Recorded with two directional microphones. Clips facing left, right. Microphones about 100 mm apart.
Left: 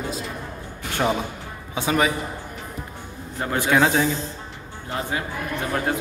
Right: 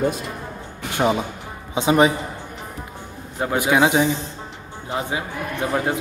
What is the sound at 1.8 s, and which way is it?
Speech, 25° right (ahead or behind).